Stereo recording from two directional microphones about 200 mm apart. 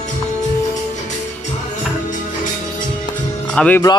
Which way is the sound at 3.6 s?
5° left (ahead or behind).